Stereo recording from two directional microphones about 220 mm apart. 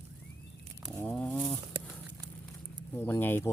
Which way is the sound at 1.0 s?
5° left (ahead or behind).